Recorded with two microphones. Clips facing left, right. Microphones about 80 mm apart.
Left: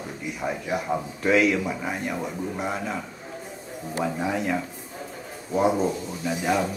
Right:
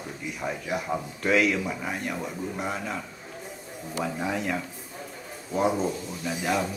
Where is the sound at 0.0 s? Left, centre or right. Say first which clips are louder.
Left 3 dB; centre.